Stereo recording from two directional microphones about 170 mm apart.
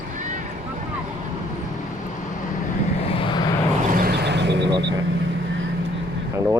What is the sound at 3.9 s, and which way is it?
Vehicle, 60° right (ahead or behind).